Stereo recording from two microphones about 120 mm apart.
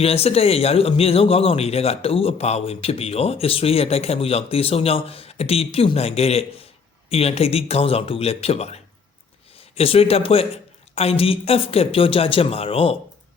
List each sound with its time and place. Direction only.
0.0 s a woman's voice: 55° left (ahead or behind)